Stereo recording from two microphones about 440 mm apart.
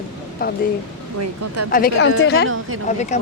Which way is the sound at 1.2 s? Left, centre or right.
Right.